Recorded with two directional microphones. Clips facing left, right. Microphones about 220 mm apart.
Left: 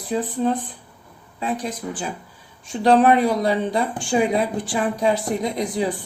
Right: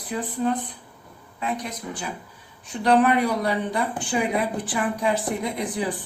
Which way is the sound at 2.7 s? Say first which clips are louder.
Left 4 dB; 30° left (ahead or behind).